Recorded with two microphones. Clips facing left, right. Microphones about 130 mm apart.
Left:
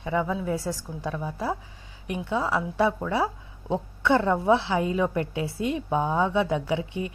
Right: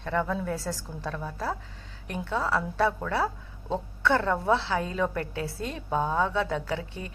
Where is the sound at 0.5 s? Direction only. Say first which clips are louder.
Left 3 dB; 20° left (ahead or behind).